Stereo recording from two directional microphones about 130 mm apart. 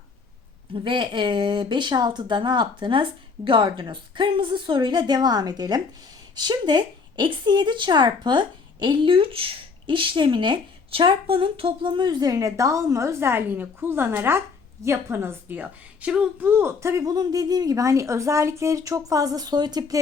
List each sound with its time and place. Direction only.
0.7 s a woman's voice: 40° right (ahead or behind)